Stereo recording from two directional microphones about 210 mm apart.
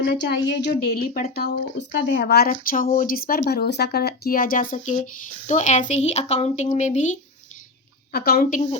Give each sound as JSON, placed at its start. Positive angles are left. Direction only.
{"t": 0.0, "sound": "speech", "side_deg": 55}
{"t": 1.4, "sound": "speech", "side_deg": 55}
{"t": 8.1, "sound": "speech", "side_deg": 45}